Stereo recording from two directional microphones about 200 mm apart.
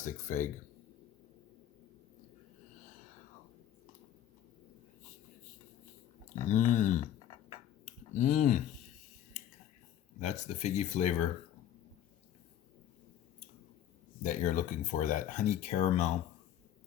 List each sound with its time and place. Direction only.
0.0 s speech: 40° left (ahead or behind)
6.5 s speech: 40° left (ahead or behind)
7.5 s finger snapping: 40° left (ahead or behind)
10.2 s speech: 35° left (ahead or behind)
14.3 s speech: 40° left (ahead or behind)